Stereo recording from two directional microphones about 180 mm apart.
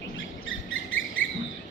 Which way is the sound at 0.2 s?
90° left.